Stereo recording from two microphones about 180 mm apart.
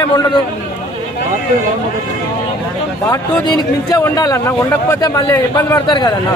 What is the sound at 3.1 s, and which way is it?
Speech, 20° left (ahead or behind).